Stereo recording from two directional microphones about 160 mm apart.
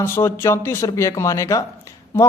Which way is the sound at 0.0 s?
15° left (ahead or behind).